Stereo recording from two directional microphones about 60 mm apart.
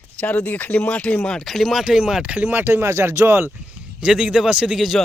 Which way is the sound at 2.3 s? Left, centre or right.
Right.